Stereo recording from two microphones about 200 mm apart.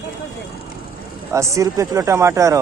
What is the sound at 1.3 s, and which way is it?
Speech, 15° right (ahead or behind).